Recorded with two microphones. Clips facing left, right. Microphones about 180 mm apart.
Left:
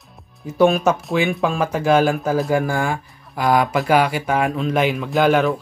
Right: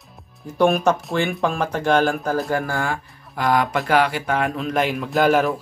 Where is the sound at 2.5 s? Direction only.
15° left (ahead or behind).